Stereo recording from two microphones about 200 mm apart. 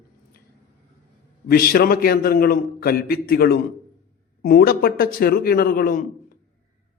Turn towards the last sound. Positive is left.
turn(degrees=45)  # may be behind; listen again after turning